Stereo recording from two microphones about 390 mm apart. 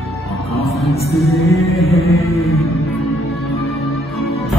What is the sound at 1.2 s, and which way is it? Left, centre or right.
Music, centre.